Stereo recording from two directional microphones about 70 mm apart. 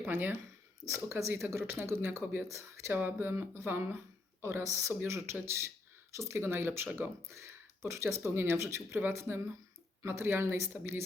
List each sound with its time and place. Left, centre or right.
0.0 s speech: right